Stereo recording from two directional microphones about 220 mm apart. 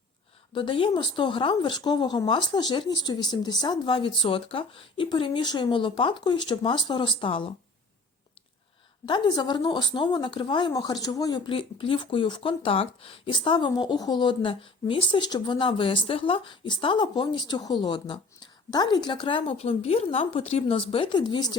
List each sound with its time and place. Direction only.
0.5 s speech: 25° left (ahead or behind)
9.0 s speech: 20° left (ahead or behind)